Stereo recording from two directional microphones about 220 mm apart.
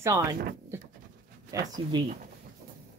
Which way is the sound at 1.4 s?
15° right (ahead or behind).